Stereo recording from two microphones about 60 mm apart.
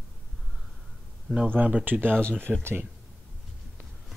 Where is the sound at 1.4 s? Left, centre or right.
Right.